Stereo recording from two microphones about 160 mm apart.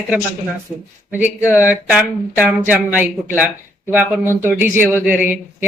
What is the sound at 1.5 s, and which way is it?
Speech, 10° right (ahead or behind).